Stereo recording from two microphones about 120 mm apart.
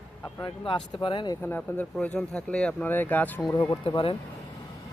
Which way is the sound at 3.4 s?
30° left (ahead or behind).